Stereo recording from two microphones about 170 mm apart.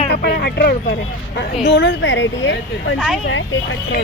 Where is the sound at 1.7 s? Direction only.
90° left.